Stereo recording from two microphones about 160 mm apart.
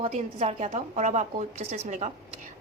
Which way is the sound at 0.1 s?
40° right (ahead or behind).